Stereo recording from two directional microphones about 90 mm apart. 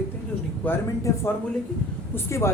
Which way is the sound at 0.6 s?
15° left (ahead or behind).